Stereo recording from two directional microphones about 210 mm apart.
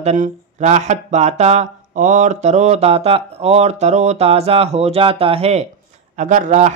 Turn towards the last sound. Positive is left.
turn(degrees=-35)  # may be behind; listen again after turning